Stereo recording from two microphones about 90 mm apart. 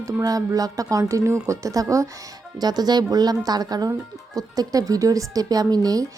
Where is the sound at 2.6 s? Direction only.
50° right (ahead or behind).